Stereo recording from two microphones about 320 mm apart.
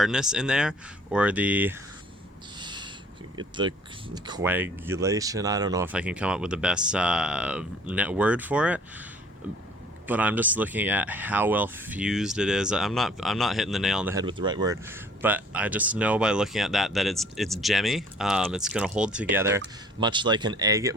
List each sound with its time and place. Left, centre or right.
0.0 s speech: centre
2.6 s owl: centre
3.3 s speech: centre
10.1 s speech: centre